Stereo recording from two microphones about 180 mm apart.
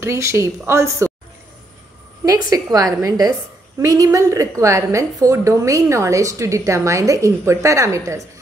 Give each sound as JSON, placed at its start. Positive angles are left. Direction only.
{"t": 0.0, "sound": "a woman's voice", "side_deg": -15}
{"t": 2.5, "sound": "a woman's voice", "side_deg": -20}